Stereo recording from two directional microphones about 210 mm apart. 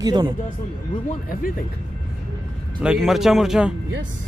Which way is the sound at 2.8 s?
5° right (ahead or behind).